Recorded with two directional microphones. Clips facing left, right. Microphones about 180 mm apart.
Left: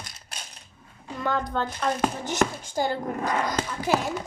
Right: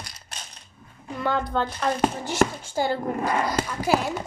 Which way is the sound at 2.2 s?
15° left (ahead or behind).